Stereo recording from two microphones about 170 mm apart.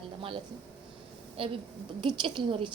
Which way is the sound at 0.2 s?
30° right (ahead or behind).